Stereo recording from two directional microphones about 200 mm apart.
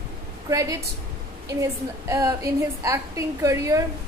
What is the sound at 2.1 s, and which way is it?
A woman's voice, 20° right (ahead or behind).